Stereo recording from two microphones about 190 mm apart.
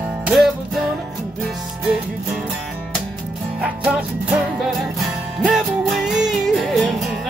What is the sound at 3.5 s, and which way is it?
Music, 5° right (ahead or behind).